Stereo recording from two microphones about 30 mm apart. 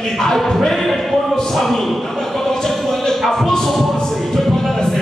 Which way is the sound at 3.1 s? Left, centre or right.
Centre.